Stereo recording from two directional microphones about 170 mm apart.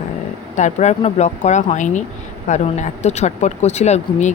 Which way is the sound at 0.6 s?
45° left (ahead or behind).